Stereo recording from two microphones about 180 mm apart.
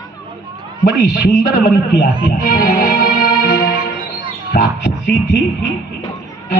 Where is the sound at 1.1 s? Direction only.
70° left (ahead or behind).